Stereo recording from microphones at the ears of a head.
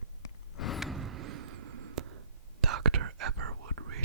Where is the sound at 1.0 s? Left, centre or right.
Right.